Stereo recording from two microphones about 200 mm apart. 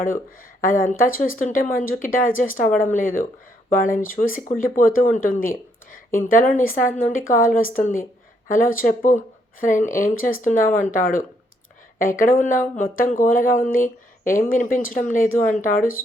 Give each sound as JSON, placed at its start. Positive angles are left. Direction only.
{"t": 0.6, "sound": "speech", "side_deg": 45}